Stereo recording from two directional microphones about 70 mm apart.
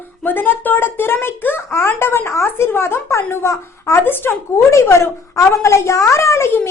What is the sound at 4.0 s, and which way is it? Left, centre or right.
Speech, left.